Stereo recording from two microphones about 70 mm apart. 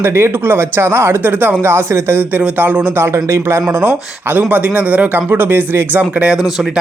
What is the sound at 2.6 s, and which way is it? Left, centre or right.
Speech, right.